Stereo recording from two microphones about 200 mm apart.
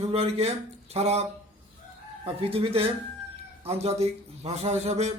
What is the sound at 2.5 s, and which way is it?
A man's voice, 30° right (ahead or behind).